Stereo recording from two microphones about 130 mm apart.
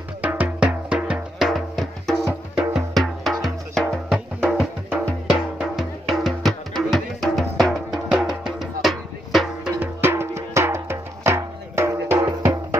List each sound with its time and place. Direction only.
0.2 s music: 10° right (ahead or behind)
9.8 s music: 20° right (ahead or behind)